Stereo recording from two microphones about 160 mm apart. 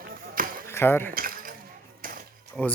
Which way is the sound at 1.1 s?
60° right (ahead or behind).